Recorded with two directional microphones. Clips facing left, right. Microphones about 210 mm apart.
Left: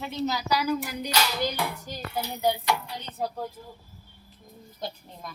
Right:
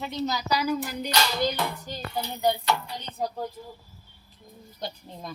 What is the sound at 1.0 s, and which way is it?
Clapping, 5° left (ahead or behind).